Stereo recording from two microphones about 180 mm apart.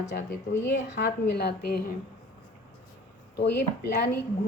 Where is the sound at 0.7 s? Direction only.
70° left (ahead or behind).